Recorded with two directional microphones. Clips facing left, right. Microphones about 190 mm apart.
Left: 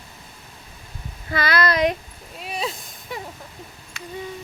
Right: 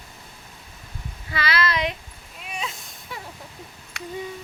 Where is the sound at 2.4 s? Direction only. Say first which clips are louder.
Left 5 dB; 35° left (ahead or behind).